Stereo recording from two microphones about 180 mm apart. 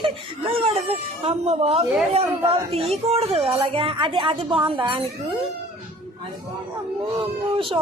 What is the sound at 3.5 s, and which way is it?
Music, 30° right (ahead or behind).